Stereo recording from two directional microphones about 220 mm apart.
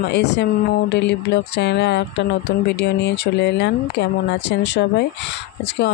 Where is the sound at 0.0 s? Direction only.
50° left (ahead or behind).